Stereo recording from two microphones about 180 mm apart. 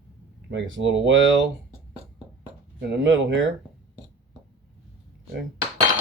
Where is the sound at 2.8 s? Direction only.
80° right.